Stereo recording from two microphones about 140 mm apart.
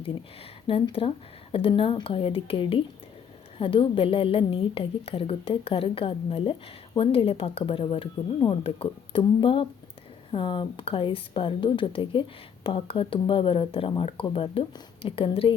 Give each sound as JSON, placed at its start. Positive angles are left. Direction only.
{"t": 0.7, "sound": "a woman's voice", "side_deg": 40}